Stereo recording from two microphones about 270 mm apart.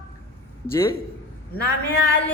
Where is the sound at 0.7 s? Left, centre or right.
Centre.